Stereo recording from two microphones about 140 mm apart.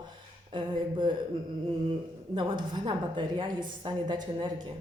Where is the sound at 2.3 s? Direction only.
35° right (ahead or behind).